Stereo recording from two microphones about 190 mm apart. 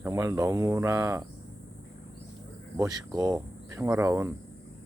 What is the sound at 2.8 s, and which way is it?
Speech, 20° right (ahead or behind).